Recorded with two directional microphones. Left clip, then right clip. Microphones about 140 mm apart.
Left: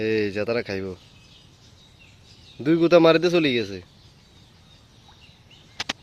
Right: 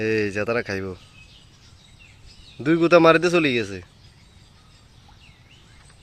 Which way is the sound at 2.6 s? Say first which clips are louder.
Right 1 dB; centre (ahead or behind).